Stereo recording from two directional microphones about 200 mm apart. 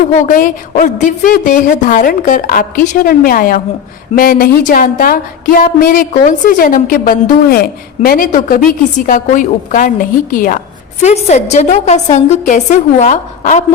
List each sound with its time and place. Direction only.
0.0 s a woman's voice: 40° left (ahead or behind)